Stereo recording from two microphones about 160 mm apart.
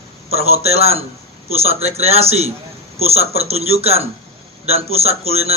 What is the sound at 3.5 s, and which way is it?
A man's voice, 40° right (ahead or behind).